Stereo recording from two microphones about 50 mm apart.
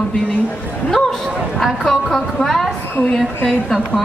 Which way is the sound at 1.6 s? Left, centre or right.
Centre.